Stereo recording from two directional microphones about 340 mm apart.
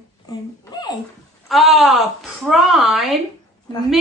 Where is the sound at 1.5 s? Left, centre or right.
Centre.